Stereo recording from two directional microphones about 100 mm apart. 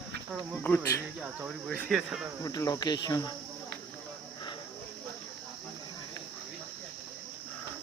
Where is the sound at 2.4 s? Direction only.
35° left (ahead or behind).